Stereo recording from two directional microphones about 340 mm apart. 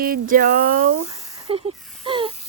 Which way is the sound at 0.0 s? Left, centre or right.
Right.